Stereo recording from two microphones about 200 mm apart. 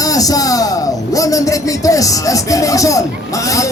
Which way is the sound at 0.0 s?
15° left (ahead or behind).